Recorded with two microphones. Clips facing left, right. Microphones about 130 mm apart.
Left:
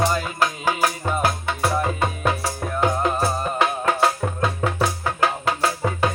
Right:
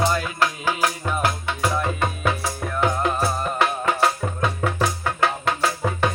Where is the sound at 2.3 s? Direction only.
30° left (ahead or behind).